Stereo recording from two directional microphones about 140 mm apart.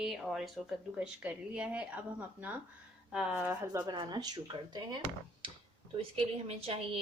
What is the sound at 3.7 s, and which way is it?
Speech, 30° right (ahead or behind).